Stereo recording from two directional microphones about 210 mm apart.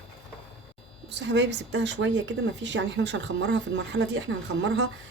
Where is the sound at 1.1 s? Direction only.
55° right (ahead or behind).